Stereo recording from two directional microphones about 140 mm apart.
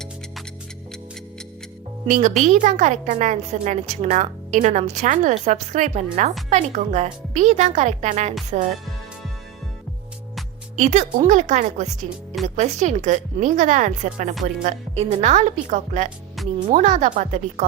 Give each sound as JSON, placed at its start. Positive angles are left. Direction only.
{"t": 2.0, "sound": "a woman's voice", "side_deg": -60}
{"t": 10.8, "sound": "a woman's voice", "side_deg": -55}